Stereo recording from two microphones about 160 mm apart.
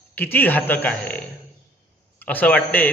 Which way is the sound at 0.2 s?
10° left (ahead or behind).